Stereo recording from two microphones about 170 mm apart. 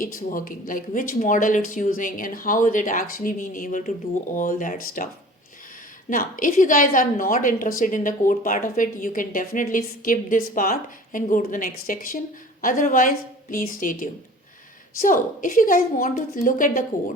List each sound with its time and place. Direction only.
0.0 s speech: 55° left (ahead or behind)
6.1 s speech: 50° left (ahead or behind)